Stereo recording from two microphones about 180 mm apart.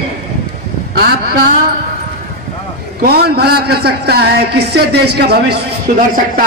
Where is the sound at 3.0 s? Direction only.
60° right (ahead or behind).